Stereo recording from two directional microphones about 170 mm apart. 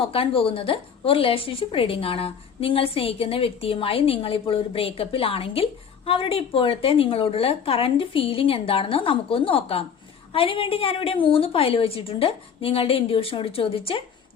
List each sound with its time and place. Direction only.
0.0 s a woman's voice: 35° left (ahead or behind)